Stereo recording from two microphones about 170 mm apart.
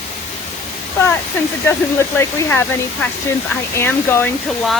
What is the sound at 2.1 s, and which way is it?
Speech, 10° left (ahead or behind).